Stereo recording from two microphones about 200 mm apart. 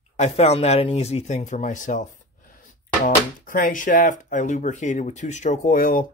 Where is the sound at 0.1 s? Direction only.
35° left (ahead or behind).